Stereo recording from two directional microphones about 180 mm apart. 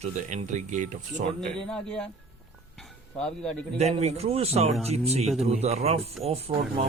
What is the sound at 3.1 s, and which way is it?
Speech, 5° left (ahead or behind).